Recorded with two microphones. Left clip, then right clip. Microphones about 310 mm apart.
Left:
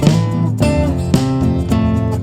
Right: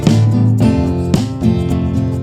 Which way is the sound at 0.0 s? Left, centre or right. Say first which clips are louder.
Right 1 dB; centre.